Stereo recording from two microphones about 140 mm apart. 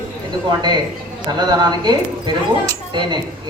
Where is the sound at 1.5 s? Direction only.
30° right (ahead or behind).